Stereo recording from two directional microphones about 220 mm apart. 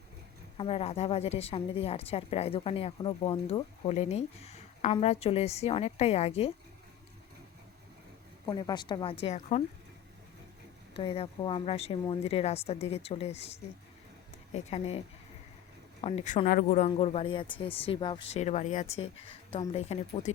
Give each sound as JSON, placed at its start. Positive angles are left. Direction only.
{"t": 0.5, "sound": "a woman's voice", "side_deg": 25}
{"t": 8.4, "sound": "a woman's voice", "side_deg": 20}
{"t": 9.2, "sound": "speech", "side_deg": 30}
{"t": 10.9, "sound": "a woman's voice", "side_deg": 25}
{"t": 14.5, "sound": "a woman's voice", "side_deg": 30}